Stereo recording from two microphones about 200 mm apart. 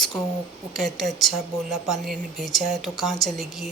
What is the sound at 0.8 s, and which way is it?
Speech, centre (ahead or behind).